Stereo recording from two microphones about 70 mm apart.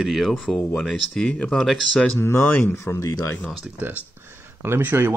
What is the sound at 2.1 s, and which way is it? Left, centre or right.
Speech, left.